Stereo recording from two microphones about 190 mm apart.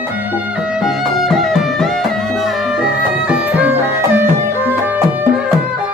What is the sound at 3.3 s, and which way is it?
Music, 10° right (ahead or behind).